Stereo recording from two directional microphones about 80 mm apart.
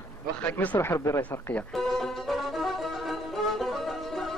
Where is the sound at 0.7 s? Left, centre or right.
Left.